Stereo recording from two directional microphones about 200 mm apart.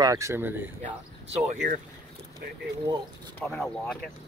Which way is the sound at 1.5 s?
35° right (ahead or behind).